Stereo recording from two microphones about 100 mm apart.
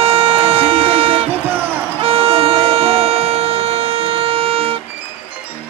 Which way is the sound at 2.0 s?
70° right (ahead or behind).